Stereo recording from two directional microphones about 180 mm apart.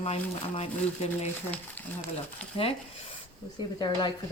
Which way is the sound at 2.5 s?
30° left (ahead or behind).